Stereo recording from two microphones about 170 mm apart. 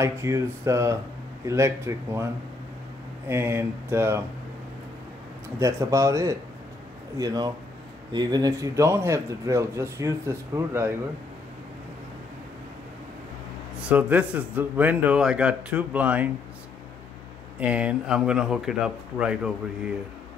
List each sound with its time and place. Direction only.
0.0 s a man's voice: 15° right (ahead or behind)
3.3 s speech: 15° right (ahead or behind)
5.6 s speech: 15° right (ahead or behind)
13.7 s speech: 10° right (ahead or behind)
17.6 s speech: 5° right (ahead or behind)